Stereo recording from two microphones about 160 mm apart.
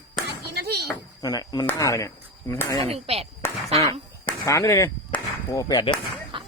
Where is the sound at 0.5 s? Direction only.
90° right.